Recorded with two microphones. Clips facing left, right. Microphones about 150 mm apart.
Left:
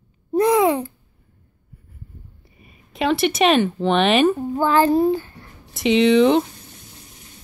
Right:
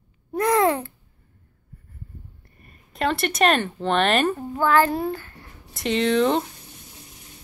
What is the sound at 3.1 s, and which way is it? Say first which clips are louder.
Speech: left 4 dB; 5° left (ahead or behind).